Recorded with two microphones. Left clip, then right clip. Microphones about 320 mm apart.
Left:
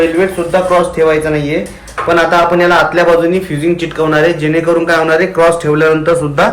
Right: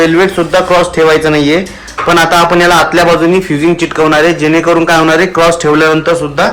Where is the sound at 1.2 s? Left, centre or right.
Centre.